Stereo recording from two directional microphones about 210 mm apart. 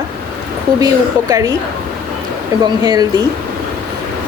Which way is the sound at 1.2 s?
15° right (ahead or behind).